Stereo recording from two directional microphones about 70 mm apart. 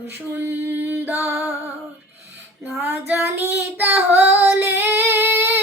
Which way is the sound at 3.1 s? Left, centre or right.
Right.